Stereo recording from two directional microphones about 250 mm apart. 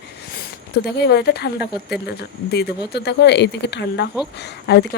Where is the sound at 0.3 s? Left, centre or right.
Left.